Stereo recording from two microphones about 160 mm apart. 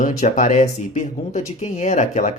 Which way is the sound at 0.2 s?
50° left (ahead or behind).